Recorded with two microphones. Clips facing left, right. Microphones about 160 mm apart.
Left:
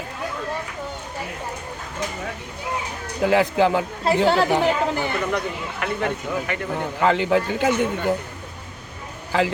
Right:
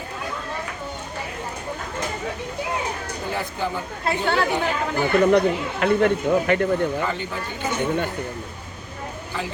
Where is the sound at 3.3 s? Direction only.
90° left.